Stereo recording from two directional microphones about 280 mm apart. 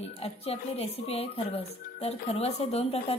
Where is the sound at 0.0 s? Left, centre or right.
Left.